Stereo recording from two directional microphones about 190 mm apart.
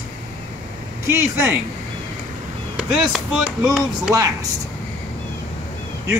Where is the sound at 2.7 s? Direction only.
5° right (ahead or behind).